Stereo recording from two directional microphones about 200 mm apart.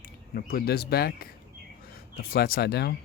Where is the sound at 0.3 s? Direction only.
50° left (ahead or behind).